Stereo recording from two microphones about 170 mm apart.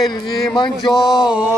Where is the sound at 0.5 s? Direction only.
25° left (ahead or behind).